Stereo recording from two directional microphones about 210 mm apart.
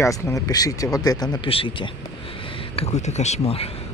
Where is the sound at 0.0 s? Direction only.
15° left (ahead or behind); by 3.6 s 30° left (ahead or behind).